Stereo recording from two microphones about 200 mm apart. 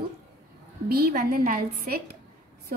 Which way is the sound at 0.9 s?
50° right (ahead or behind).